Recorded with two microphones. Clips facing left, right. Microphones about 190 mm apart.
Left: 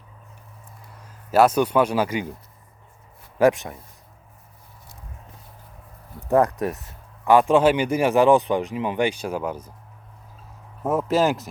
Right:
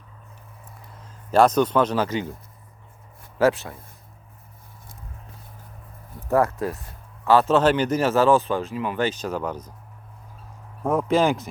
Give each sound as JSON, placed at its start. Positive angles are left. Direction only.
{"t": 1.0, "sound": "a man's voice", "side_deg": 5}
{"t": 3.3, "sound": "speech", "side_deg": 15}
{"t": 6.2, "sound": "speech", "side_deg": 20}
{"t": 10.8, "sound": "speech", "side_deg": 5}